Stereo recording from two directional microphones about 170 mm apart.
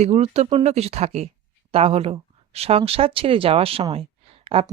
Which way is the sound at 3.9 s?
35° right (ahead or behind).